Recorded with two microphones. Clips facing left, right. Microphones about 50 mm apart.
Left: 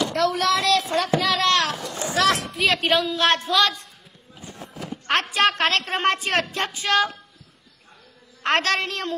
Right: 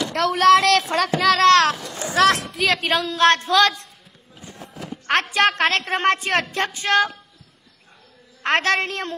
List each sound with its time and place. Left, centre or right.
0.1 s speech: right
5.3 s speech: right
8.5 s a woman's voice: right